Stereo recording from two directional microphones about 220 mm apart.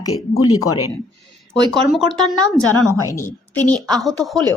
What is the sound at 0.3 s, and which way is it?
Speech, 80° left.